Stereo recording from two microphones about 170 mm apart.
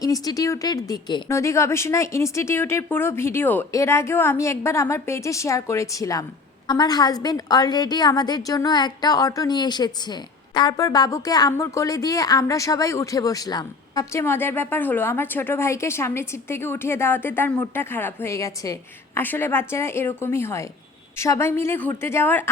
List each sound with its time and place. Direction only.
0.0 s a woman's voice: 20° left (ahead or behind)